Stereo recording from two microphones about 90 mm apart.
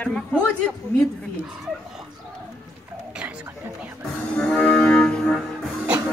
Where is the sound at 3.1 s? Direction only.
10° right (ahead or behind).